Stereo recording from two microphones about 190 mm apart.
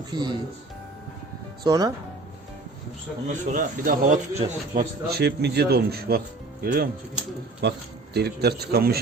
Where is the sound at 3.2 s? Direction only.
40° right (ahead or behind).